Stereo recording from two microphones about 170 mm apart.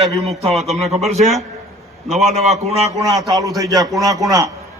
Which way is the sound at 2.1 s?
Centre (ahead or behind).